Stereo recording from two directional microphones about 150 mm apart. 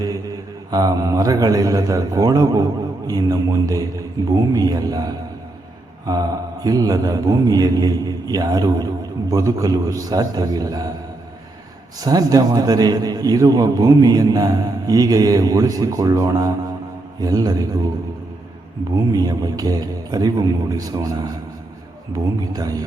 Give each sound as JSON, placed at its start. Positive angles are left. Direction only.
{"t": 0.7, "sound": "a man's voice", "side_deg": -25}
{"t": 11.9, "sound": "a man's voice", "side_deg": -25}
{"t": 19.1, "sound": "a man's voice", "side_deg": -25}